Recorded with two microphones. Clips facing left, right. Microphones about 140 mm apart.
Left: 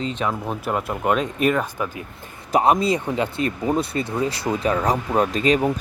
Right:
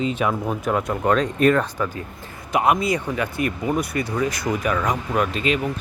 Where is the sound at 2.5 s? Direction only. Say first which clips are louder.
Left 2 dB; 35° left (ahead or behind).